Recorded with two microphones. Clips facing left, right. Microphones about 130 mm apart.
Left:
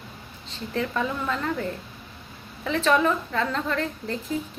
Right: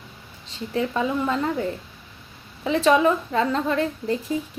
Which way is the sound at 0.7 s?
15° right (ahead or behind).